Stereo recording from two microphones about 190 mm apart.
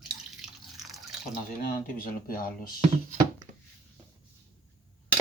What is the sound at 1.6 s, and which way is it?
Speech, 50° left (ahead or behind).